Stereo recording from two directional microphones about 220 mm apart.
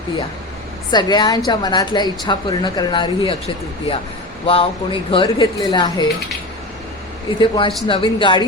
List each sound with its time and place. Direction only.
0.9 s speech: 20° left (ahead or behind)
7.3 s speech: 20° left (ahead or behind)